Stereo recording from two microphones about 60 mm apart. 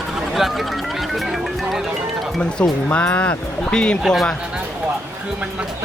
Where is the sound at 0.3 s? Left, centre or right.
Centre.